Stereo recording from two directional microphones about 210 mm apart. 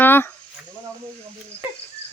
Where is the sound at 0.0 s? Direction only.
10° left (ahead or behind).